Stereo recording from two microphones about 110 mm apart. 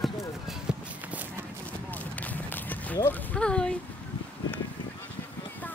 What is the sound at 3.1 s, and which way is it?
Speech, 10° left (ahead or behind).